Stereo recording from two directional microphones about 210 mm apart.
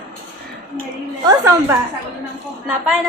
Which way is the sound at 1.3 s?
15° right (ahead or behind).